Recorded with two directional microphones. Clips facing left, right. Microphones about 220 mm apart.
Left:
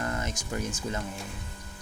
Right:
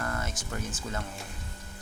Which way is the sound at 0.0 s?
20° left (ahead or behind).